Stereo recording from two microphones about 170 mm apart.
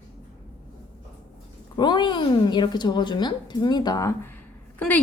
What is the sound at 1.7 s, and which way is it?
A woman's voice, 25° left (ahead or behind).